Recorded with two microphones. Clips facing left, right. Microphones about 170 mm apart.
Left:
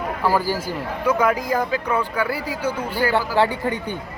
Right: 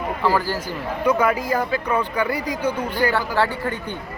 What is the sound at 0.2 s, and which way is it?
Speech, 10° left (ahead or behind).